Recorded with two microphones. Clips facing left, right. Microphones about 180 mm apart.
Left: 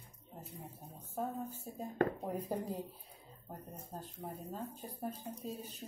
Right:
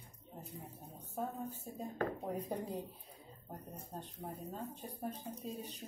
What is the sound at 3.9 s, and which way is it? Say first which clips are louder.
Speech: left 1 dB; centre (ahead or behind).